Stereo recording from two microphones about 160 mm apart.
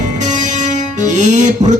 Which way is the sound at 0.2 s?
50° right (ahead or behind).